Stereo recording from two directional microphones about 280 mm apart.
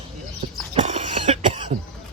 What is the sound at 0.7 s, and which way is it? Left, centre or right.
Cough, right.